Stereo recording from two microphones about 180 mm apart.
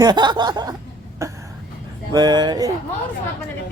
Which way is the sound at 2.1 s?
25° right (ahead or behind).